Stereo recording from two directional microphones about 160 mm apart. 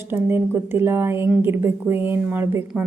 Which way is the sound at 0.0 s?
15° right (ahead or behind).